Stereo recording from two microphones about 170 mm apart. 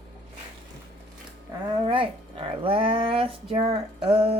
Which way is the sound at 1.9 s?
30° right (ahead or behind).